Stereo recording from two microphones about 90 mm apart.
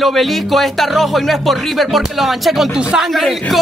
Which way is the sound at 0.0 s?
Centre (ahead or behind).